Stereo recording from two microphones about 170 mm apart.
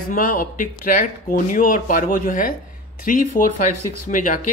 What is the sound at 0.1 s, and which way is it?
Speech, 55° left (ahead or behind).